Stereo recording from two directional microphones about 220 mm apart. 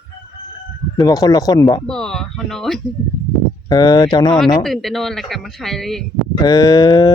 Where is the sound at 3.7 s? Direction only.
20° left (ahead or behind).